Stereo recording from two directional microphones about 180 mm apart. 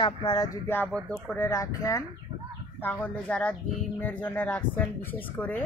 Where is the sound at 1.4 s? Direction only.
15° left (ahead or behind).